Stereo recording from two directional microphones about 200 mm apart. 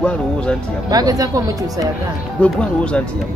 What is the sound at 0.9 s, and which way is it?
Speech, 20° right (ahead or behind).